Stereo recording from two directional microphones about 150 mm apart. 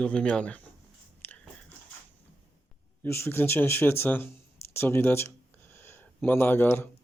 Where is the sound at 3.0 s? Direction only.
15° left (ahead or behind).